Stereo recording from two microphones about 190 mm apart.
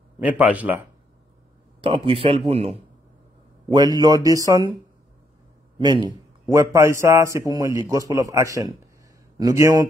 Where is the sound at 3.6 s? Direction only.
25° right (ahead or behind).